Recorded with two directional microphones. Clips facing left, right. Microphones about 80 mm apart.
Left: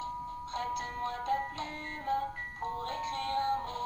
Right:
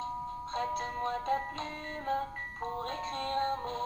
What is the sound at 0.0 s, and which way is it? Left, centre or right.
Music, right.